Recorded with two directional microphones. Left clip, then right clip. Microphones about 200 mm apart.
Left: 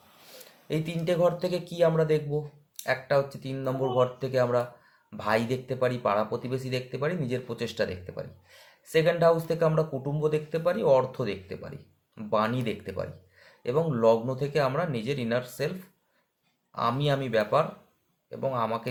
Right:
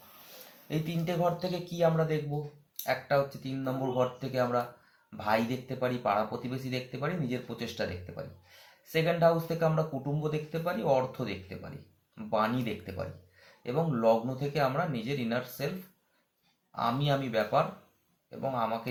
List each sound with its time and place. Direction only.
0.7 s speech: 55° left (ahead or behind)
16.7 s speech: 50° left (ahead or behind)